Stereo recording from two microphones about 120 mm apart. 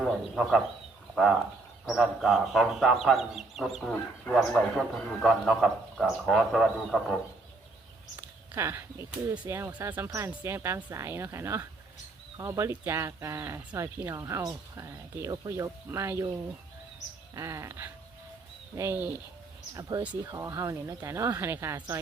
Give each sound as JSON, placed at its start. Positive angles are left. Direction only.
{"t": 0.0, "sound": "speech", "side_deg": -5}
{"t": 1.8, "sound": "speech", "side_deg": 0}
{"t": 8.5, "sound": "speech", "side_deg": -20}
{"t": 17.3, "sound": "speech", "side_deg": -25}
{"t": 20.3, "sound": "speech", "side_deg": -25}